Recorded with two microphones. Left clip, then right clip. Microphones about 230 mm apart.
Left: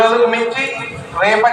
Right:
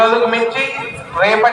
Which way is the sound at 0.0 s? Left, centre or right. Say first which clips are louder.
Even; right.